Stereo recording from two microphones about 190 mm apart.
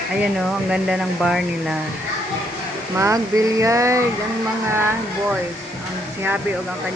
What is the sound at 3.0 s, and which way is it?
Speech, 15° right (ahead or behind).